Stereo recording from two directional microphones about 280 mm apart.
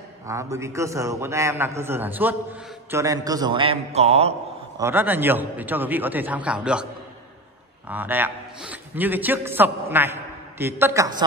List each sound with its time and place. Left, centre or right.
0.3 s a man's voice: centre
4.7 s a man's voice: centre
7.9 s a man's voice: centre